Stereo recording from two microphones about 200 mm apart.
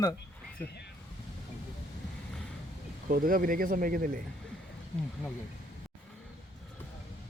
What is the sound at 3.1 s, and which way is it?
Speech, 45° right (ahead or behind).